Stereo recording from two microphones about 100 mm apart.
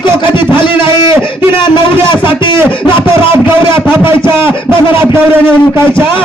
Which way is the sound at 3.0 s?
25° right (ahead or behind).